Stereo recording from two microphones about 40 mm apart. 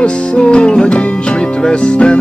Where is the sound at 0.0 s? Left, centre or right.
Left.